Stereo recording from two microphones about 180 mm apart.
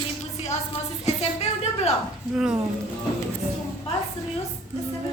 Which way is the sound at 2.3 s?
5° right (ahead or behind).